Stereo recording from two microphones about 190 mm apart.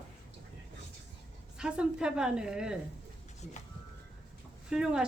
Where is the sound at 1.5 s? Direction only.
5° right (ahead or behind).